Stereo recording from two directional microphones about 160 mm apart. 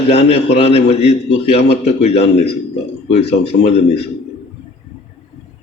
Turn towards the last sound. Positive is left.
turn(degrees=40)  # may be behind; listen again after turning